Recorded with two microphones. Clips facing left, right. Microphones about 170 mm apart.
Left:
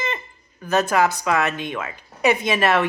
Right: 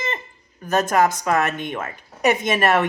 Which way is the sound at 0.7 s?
45° right (ahead or behind).